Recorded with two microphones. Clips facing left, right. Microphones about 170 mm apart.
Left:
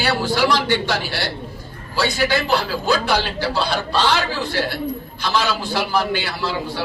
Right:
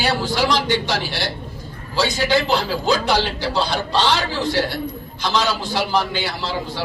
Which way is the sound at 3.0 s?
20° right (ahead or behind).